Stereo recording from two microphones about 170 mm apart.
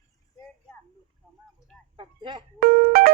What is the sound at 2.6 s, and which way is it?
Music, 60° right (ahead or behind).